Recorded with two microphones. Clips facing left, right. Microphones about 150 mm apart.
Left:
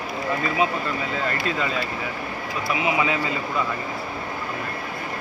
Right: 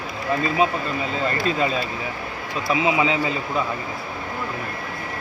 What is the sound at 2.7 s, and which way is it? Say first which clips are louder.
Speech: right 3 dB; 20° right (ahead or behind).